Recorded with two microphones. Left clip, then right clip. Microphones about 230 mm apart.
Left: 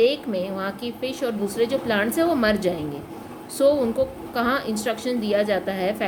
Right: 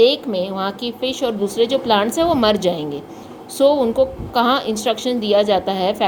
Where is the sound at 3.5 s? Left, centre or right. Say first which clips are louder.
Right 5 dB; centre.